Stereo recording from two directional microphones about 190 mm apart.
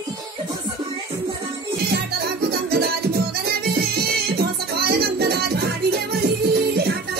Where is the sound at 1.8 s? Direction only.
60° right (ahead or behind).